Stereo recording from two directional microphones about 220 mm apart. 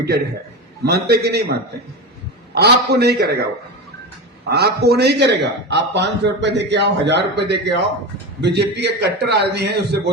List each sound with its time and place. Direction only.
0.9 s a man's voice: 45° right (ahead or behind)
2.6 s a man's voice: 45° right (ahead or behind)
4.5 s a man's voice: 45° right (ahead or behind)